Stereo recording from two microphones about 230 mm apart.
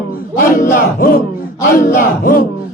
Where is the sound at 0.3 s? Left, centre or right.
Left.